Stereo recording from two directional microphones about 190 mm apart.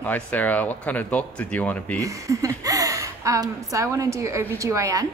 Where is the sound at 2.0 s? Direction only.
15° right (ahead or behind).